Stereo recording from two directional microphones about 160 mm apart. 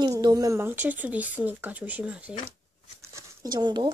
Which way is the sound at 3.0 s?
20° right (ahead or behind).